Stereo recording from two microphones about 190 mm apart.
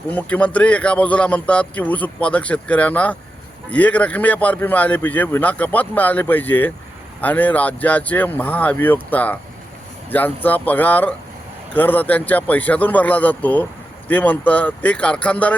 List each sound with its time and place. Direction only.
0.1 s a man's voice: 5° left (ahead or behind)